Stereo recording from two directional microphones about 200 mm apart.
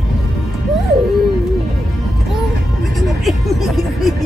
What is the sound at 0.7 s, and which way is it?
Music, centre (ahead or behind).